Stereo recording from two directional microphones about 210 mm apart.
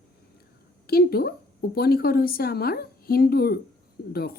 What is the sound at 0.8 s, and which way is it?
Speech, 45° left (ahead or behind).